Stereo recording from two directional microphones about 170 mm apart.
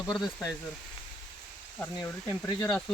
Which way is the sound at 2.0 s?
20° left (ahead or behind).